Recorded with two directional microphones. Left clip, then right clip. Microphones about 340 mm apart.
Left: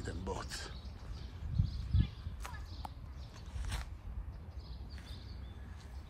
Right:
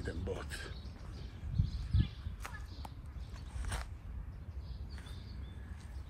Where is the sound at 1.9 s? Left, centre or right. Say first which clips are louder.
Right 1 dB; left.